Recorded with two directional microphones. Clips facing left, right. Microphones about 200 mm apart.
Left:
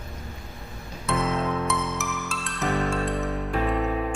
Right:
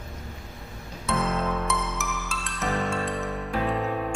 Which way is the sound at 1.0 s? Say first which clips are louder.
Left 1 dB; centre (ahead or behind).